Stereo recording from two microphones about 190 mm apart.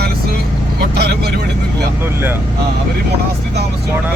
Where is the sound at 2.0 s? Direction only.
10° right (ahead or behind).